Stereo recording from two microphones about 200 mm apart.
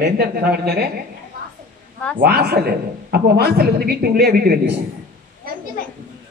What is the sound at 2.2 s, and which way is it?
A man's voice, 50° right (ahead or behind).